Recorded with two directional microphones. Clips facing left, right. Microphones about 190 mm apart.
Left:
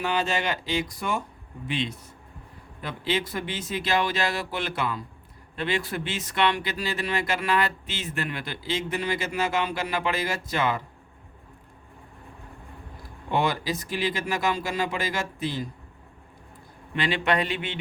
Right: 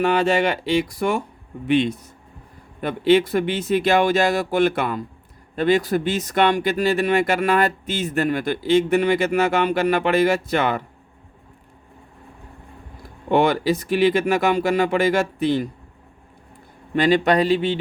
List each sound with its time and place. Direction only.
0.0 s speech: 65° right (ahead or behind)
5.5 s speech: 40° right (ahead or behind); by 10.8 s 60° right (ahead or behind)
13.3 s speech: 65° right (ahead or behind)
16.9 s speech: 40° right (ahead or behind)